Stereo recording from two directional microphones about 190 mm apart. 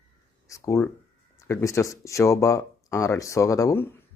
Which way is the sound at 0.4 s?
15° left (ahead or behind).